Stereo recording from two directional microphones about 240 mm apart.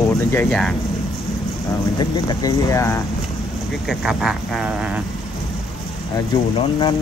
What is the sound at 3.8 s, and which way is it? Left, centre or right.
Speech, centre.